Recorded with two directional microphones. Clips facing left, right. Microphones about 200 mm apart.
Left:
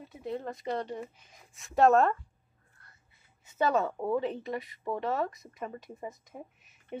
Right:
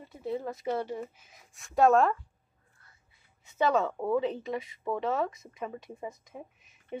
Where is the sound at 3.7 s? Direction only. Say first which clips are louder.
Right 1 dB; centre (ahead or behind).